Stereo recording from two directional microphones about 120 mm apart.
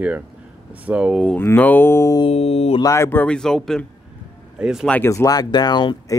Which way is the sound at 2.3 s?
60° left (ahead or behind).